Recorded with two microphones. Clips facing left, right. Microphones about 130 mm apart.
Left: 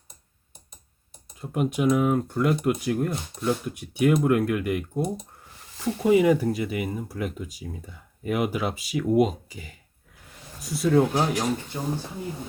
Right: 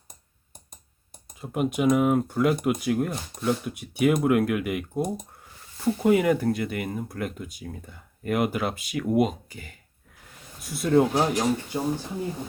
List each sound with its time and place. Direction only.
1.4 s speech: centre (ahead or behind)